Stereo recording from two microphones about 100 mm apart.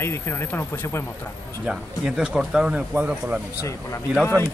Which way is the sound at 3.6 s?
30° left (ahead or behind).